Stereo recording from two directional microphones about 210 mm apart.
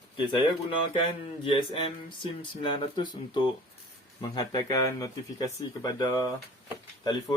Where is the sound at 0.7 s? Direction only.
25° left (ahead or behind).